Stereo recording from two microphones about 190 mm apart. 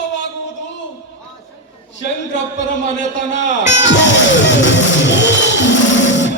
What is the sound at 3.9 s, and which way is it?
Music, 70° left (ahead or behind).